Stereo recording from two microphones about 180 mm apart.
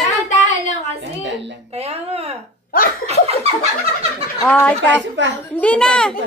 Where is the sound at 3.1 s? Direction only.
35° right (ahead or behind).